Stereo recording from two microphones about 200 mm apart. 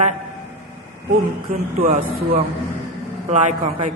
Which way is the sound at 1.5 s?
40° right (ahead or behind).